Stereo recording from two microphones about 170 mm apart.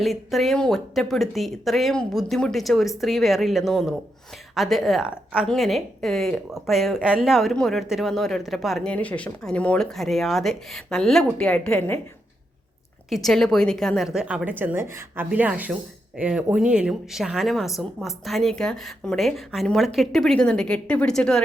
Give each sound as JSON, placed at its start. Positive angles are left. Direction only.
{"t": 0.0, "sound": "speech", "side_deg": 0}
{"t": 13.1, "sound": "speech", "side_deg": 0}